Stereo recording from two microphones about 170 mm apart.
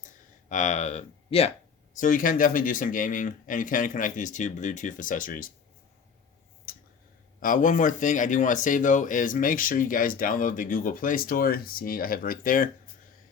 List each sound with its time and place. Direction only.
0.0 s a sound: 45° left (ahead or behind)
1.9 s speech: 50° left (ahead or behind)
7.3 s speech: 55° left (ahead or behind)